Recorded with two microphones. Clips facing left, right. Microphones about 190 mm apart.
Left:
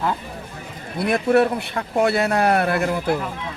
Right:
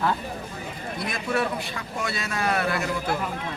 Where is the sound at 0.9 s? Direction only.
60° left (ahead or behind).